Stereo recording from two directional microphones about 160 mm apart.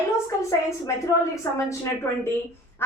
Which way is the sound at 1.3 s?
20° left (ahead or behind).